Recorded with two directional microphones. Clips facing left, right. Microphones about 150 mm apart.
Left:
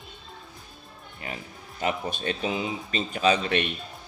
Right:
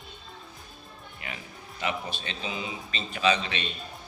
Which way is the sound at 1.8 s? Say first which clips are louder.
Left 4 dB; 45° left (ahead or behind).